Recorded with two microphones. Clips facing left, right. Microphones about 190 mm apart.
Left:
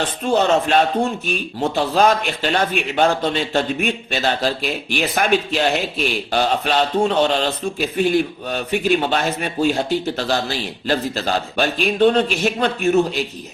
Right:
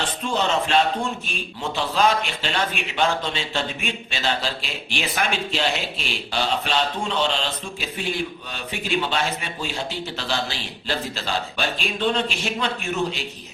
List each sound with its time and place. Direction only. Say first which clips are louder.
0.2 s speech: left 7 dB; 50° left (ahead or behind)